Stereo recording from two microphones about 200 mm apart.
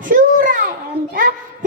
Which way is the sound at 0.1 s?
45° right (ahead or behind).